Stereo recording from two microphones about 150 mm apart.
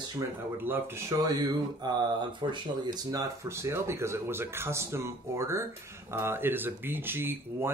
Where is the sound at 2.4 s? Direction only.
30° right (ahead or behind).